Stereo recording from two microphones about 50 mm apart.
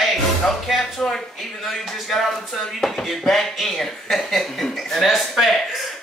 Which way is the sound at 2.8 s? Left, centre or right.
Centre.